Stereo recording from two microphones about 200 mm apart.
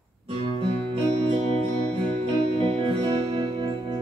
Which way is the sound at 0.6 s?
25° right (ahead or behind).